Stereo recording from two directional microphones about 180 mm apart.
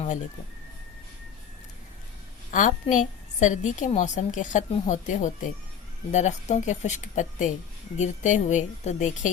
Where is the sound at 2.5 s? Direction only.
45° left (ahead or behind).